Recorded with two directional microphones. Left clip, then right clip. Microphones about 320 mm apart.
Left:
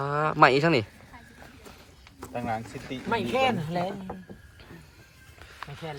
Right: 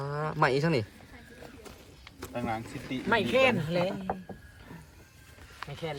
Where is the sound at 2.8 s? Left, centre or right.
Centre.